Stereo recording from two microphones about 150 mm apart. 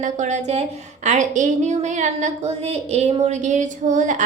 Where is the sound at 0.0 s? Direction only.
55° right (ahead or behind).